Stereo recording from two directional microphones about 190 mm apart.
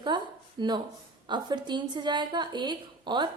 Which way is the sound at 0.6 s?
25° right (ahead or behind).